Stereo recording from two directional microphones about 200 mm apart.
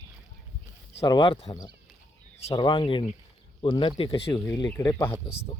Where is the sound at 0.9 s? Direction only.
25° left (ahead or behind).